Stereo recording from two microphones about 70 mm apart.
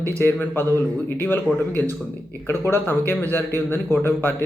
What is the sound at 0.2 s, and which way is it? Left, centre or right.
Speech, left.